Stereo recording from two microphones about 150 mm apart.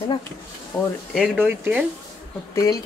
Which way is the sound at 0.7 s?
20° left (ahead or behind).